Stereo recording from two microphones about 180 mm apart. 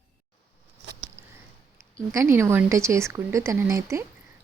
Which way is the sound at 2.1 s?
15° right (ahead or behind).